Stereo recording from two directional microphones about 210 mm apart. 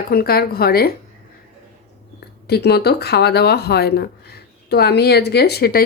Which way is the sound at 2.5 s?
50° left (ahead or behind).